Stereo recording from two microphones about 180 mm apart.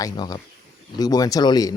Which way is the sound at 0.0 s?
25° left (ahead or behind).